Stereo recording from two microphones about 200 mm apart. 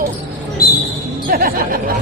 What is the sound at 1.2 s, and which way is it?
Music, 45° right (ahead or behind).